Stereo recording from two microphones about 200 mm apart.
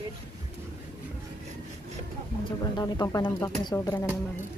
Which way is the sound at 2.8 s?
20° left (ahead or behind).